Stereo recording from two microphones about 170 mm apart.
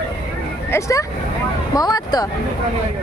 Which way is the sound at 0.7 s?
20° left (ahead or behind).